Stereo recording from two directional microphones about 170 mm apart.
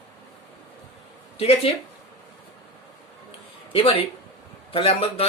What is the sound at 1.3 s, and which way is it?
Speech, 35° left (ahead or behind).